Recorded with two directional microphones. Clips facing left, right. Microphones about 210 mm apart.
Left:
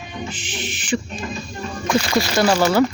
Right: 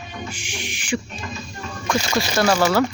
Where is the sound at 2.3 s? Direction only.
Centre (ahead or behind).